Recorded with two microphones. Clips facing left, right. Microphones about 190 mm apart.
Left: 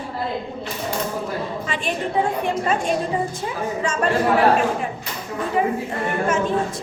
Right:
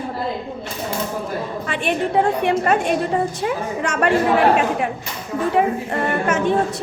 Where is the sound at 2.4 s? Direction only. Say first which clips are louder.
Right 4 dB; 65° right (ahead or behind).